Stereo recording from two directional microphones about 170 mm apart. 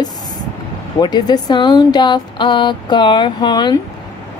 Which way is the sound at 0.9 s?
25° left (ahead or behind).